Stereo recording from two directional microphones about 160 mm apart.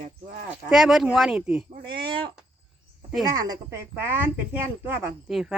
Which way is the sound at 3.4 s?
20° right (ahead or behind).